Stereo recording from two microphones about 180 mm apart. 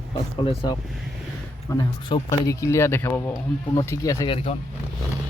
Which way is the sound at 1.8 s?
20° left (ahead or behind).